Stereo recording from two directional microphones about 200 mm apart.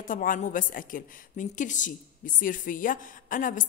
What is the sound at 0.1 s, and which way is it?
A woman's voice, 40° left (ahead or behind).